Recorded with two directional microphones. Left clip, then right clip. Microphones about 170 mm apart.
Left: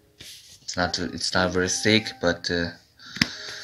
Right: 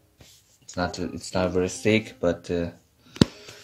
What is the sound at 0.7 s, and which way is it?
Speech, centre (ahead or behind).